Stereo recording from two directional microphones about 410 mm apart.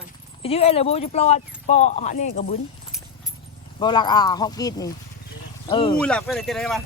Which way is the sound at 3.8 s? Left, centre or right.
Centre.